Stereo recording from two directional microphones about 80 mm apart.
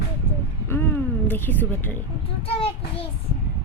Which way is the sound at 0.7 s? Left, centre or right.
Left.